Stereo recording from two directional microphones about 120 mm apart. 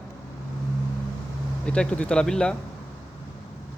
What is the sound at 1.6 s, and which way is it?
Speech, 10° left (ahead or behind).